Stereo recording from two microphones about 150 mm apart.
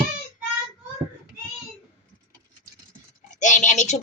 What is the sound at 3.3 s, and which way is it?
Speech, 55° left (ahead or behind).